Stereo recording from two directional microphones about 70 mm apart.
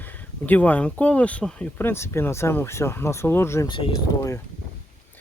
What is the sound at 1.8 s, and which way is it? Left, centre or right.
Speech, left.